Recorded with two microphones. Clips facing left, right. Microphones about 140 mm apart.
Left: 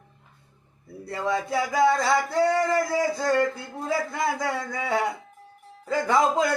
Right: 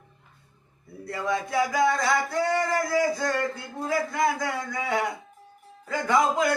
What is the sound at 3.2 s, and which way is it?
A man's voice, 25° left (ahead or behind).